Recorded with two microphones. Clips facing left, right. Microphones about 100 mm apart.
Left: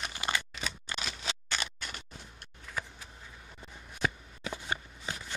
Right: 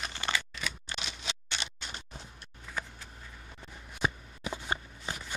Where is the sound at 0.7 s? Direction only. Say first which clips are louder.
Left 1 dB; 40° left (ahead or behind).